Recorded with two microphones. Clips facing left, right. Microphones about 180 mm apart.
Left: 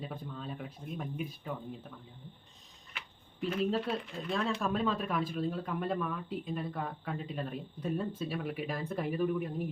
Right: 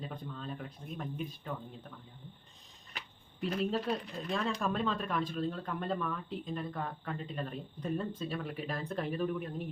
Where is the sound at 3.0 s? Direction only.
35° right (ahead or behind).